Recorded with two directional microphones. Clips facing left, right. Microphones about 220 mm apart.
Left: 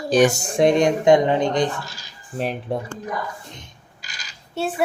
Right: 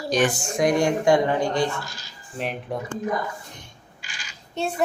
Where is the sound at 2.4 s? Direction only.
35° left (ahead or behind).